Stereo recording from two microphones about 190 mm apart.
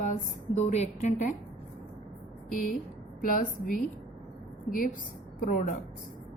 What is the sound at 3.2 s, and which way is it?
Speech, 45° left (ahead or behind).